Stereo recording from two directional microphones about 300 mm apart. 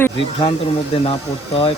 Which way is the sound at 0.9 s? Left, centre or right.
Centre.